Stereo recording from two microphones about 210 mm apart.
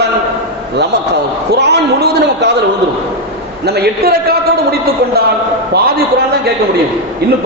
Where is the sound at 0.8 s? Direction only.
55° right (ahead or behind).